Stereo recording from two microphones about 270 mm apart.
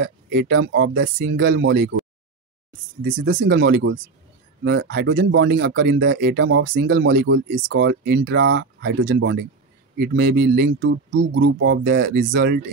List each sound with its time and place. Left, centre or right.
0.0 s speech: right
3.2 s speech: right